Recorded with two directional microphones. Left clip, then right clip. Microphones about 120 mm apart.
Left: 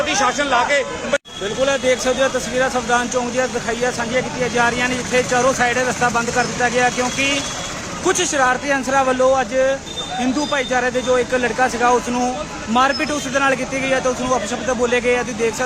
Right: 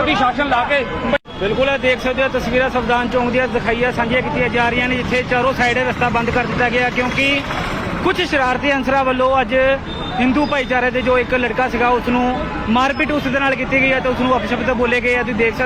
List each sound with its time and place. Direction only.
1.6 s speech: 30° left (ahead or behind)